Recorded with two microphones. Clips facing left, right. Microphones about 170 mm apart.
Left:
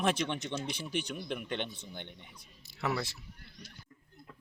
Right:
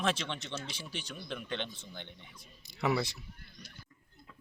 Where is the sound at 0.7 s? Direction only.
60° left (ahead or behind).